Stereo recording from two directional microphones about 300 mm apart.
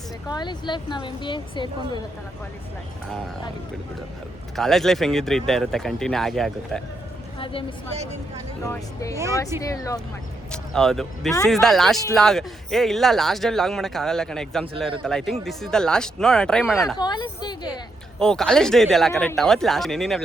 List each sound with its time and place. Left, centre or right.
0.3 s speech: centre
4.5 s speech: centre
7.3 s a woman's voice: centre
8.6 s speech: centre
17.0 s speech: centre
18.2 s speech: centre